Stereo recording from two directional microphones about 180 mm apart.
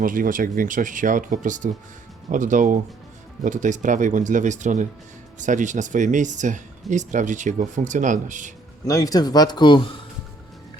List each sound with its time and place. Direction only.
0.0 s speech: 50° right (ahead or behind)
8.8 s speech: 20° left (ahead or behind)